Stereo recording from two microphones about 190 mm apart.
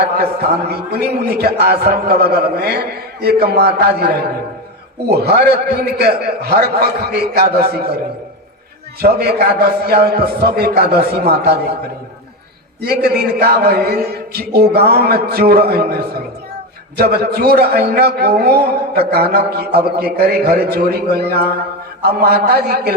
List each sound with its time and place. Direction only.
0.0 s a man's voice: 55° right (ahead or behind)
12.8 s a man's voice: 55° right (ahead or behind)